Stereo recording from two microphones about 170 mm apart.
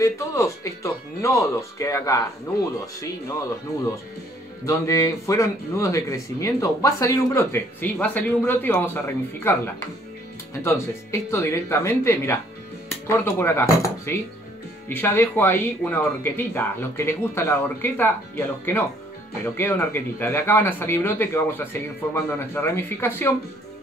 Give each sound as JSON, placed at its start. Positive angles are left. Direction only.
{"t": 0.0, "sound": "speech", "side_deg": 20}
{"t": 4.6, "sound": "speech", "side_deg": 20}
{"t": 10.6, "sound": "speech", "side_deg": 15}